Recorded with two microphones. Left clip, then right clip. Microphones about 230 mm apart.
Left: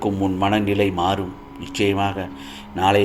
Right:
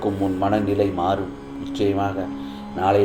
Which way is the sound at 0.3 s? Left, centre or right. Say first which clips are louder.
Left 1 dB; left.